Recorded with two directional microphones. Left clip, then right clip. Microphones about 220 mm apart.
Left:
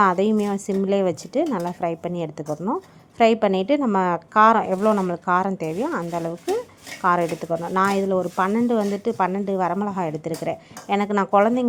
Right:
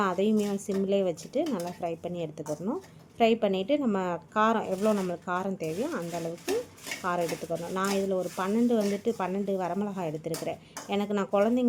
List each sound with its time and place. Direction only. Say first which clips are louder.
0.0 s speech: left 8 dB; 20° left (ahead or behind)